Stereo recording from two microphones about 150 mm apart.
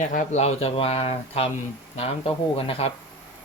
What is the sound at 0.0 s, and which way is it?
Speech, 60° left (ahead or behind).